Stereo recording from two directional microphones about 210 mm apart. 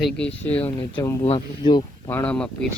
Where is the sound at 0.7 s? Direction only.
20° left (ahead or behind).